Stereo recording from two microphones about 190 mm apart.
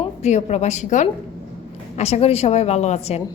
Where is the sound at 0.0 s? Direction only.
35° left (ahead or behind).